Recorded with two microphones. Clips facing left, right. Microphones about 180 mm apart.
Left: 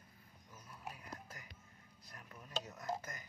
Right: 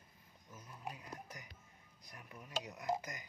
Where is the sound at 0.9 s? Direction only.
20° right (ahead or behind).